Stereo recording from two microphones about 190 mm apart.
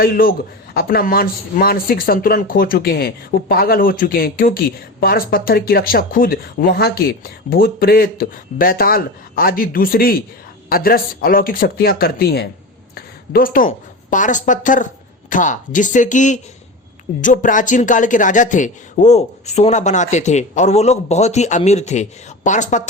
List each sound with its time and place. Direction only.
0.0 s a woman's voice: 50° left (ahead or behind)